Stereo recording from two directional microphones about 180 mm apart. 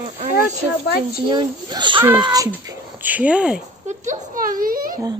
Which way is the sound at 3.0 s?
10° right (ahead or behind).